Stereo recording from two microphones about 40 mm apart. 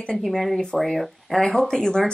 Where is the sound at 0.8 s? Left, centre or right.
Centre.